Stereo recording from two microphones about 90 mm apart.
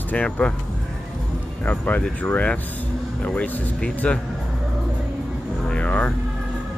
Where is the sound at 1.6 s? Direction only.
15° left (ahead or behind).